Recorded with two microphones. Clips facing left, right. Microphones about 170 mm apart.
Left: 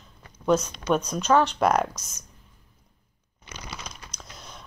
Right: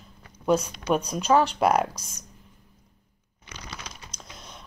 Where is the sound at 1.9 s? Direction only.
35° right (ahead or behind).